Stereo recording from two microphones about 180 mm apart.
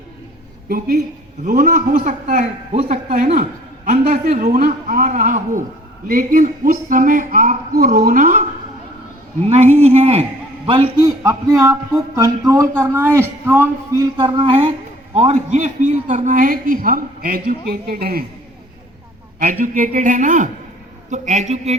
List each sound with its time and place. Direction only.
1.5 s a woman's voice: 45° right (ahead or behind)
9.5 s a man's voice: 35° right (ahead or behind)
11.0 s a man's voice: 15° right (ahead or behind); by 18.2 s 60° right (ahead or behind)
19.4 s a woman's voice: 50° right (ahead or behind)